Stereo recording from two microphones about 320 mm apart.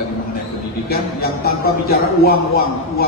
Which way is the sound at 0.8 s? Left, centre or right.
Left.